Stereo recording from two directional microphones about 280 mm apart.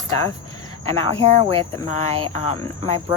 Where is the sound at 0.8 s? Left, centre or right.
Right.